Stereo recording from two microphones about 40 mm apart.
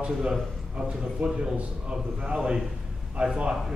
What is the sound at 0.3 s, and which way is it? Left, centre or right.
A man's voice, right.